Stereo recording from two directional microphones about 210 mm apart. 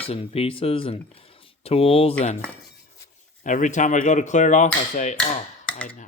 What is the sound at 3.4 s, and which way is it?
Speech, 35° left (ahead or behind).